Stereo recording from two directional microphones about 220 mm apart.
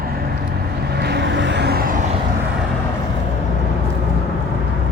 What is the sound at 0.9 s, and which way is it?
Vehicle, 50° right (ahead or behind).